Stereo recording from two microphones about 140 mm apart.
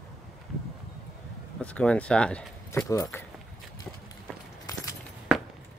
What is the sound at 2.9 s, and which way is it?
Speech, 20° left (ahead or behind).